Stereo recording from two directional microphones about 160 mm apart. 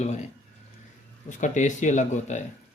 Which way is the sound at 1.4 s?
50° left (ahead or behind).